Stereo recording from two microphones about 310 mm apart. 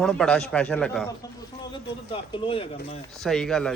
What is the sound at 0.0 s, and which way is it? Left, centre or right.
Speech, centre.